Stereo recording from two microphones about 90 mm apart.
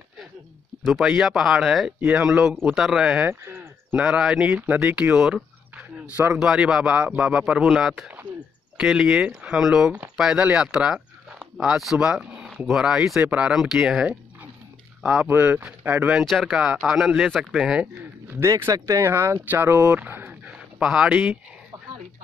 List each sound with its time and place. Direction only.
0.8 s speech: centre (ahead or behind)
3.3 s a sound: 25° right (ahead or behind)
4.0 s speech: 5° right (ahead or behind)
4.5 s speech: 25° right (ahead or behind)
5.1 s a sound: 10° right (ahead or behind)
6.1 s speech: 15° right (ahead or behind)
6.4 s speech: 5° right (ahead or behind)
15.2 s speech: 20° right (ahead or behind)
16.1 s speech: centre (ahead or behind)
18.4 s speech: 35° right (ahead or behind)
20.4 s a sound: 5° right (ahead or behind)